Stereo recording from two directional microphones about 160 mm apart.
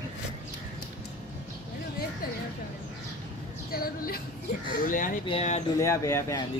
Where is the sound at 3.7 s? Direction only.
65° left (ahead or behind).